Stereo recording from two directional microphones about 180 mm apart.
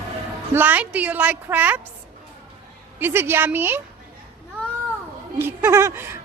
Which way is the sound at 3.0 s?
10° right (ahead or behind).